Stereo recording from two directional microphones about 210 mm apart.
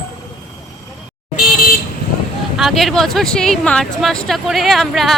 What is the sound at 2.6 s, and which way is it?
Speech, centre (ahead or behind).